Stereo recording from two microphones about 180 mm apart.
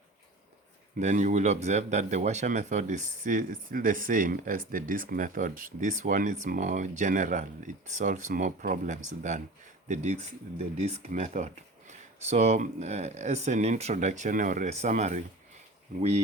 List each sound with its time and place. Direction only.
0.9 s speech: 40° right (ahead or behind)